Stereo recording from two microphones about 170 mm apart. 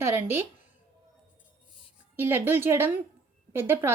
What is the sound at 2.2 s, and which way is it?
Speech, 15° right (ahead or behind).